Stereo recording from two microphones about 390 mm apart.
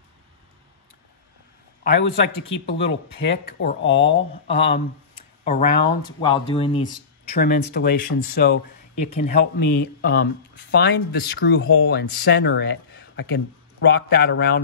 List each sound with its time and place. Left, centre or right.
1.9 s speech: left